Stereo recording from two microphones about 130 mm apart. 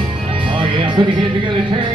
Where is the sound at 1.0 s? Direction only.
40° right (ahead or behind).